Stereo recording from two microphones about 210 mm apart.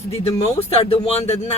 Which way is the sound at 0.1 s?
30° left (ahead or behind).